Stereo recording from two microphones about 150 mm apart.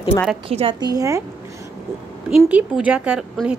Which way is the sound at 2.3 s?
10° right (ahead or behind).